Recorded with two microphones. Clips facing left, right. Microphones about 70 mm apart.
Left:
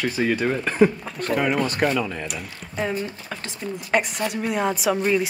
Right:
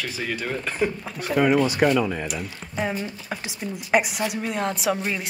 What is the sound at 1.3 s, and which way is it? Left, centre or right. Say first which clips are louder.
Speech: right 3 dB; centre.